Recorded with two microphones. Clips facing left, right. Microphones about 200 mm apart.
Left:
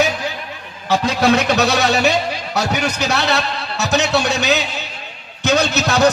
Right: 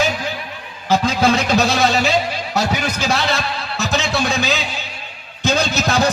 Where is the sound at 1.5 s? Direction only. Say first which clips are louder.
Even; 65° left (ahead or behind).